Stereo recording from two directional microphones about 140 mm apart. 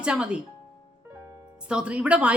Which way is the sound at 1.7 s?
10° right (ahead or behind).